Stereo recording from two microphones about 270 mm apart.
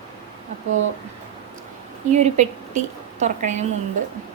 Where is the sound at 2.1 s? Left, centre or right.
Right.